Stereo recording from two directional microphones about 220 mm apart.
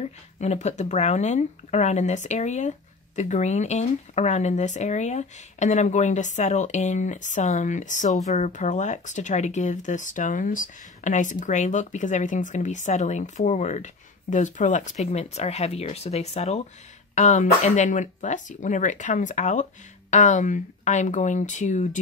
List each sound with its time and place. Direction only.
0.0 s speech: 30° left (ahead or behind)